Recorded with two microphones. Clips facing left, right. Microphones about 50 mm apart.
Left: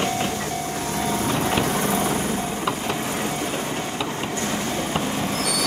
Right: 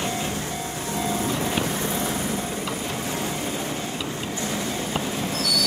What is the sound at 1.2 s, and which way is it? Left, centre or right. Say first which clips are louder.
Vehicle: left 3 dB; left.